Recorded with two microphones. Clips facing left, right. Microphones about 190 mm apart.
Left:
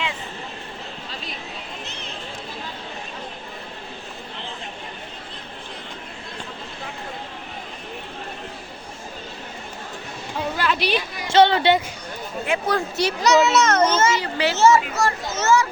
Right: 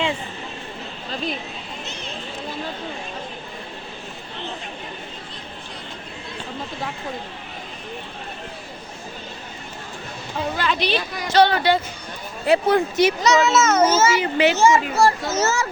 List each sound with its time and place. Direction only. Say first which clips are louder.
10.6 s a sound: left 1 dB; 5° left (ahead or behind)
11.3 s speech: left 1 dB; 25° left (ahead or behind)
12.5 s speech: right 6 dB; 25° right (ahead or behind)
13.2 s a child's voice: even; centre (ahead or behind)
14.2 s speech: right 2 dB; 20° right (ahead or behind)
14.9 s a child's voice: right 5 dB; 35° right (ahead or behind)